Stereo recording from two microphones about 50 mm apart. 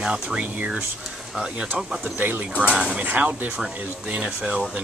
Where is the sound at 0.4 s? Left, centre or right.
Right.